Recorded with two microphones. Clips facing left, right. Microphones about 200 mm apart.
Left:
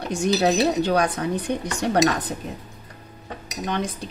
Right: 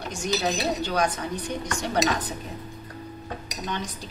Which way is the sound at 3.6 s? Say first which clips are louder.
Left 6 dB; 60° left (ahead or behind).